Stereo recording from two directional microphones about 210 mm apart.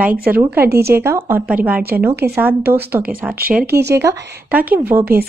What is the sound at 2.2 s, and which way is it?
Speech, 50° right (ahead or behind).